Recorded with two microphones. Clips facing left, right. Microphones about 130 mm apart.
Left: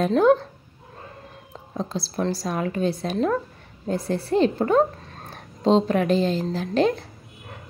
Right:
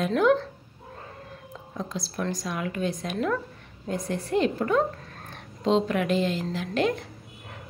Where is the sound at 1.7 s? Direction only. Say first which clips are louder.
Left 5 dB; 30° left (ahead or behind).